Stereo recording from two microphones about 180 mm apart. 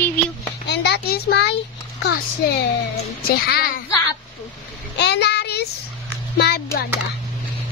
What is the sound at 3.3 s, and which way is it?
Speech, 55° left (ahead or behind).